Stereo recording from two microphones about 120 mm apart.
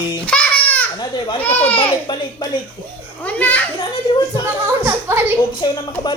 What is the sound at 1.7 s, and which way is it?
Speech, 40° left (ahead or behind).